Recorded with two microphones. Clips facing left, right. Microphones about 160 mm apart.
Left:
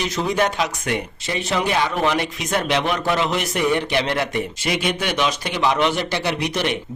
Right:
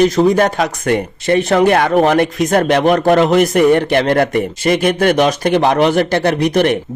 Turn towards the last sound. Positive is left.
turn(degrees=-50)  # may be behind; listen again after turning